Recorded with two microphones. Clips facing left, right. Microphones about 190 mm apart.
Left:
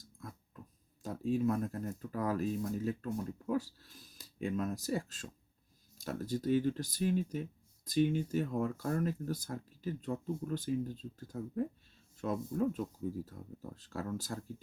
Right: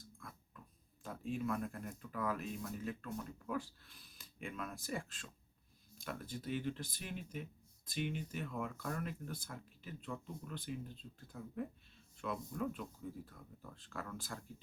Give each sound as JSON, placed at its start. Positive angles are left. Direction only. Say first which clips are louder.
{"t": 0.2, "sound": "dog", "louder": "left 9 dB", "side_deg": 40}
{"t": 1.0, "sound": "speech", "louder": "left 8 dB", "side_deg": 35}